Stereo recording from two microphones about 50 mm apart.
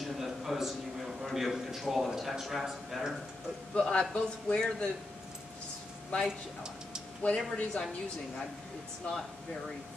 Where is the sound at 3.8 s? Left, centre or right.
Centre.